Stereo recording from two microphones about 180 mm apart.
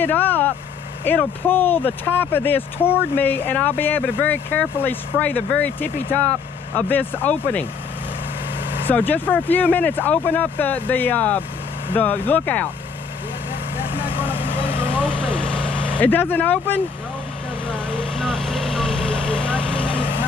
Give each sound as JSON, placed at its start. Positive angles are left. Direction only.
{"t": 0.0, "sound": "speech", "side_deg": 10}
{"t": 8.8, "sound": "speech", "side_deg": 10}
{"t": 13.9, "sound": "vehicle", "side_deg": 30}
{"t": 15.0, "sound": "vehicle", "side_deg": 5}
{"t": 16.0, "sound": "speech", "side_deg": 10}
{"t": 17.9, "sound": "vehicle", "side_deg": 5}